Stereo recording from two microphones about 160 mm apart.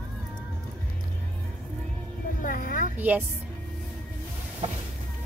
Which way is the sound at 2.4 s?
55° left (ahead or behind).